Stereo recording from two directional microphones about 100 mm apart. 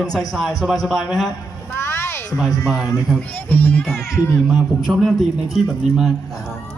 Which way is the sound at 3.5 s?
20° left (ahead or behind).